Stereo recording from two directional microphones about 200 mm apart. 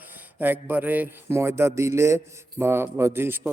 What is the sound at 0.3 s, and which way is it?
Speech, 10° right (ahead or behind).